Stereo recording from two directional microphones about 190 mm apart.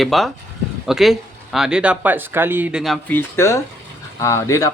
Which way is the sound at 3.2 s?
15° left (ahead or behind).